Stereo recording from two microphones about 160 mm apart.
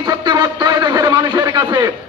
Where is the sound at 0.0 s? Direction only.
25° right (ahead or behind).